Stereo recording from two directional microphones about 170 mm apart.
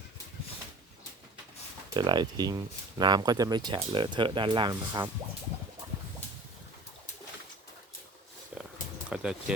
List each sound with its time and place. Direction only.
1.9 s speech: 25° right (ahead or behind)
8.5 s roaring cats: 5° right (ahead or behind)
9.0 s a sound: 5° right (ahead or behind)